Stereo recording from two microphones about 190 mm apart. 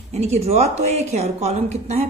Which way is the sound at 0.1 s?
35° right (ahead or behind).